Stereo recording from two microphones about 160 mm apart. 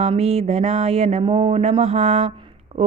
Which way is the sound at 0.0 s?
40° right (ahead or behind).